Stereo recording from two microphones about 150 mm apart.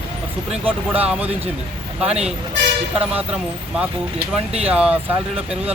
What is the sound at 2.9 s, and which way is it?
Speech, 10° right (ahead or behind).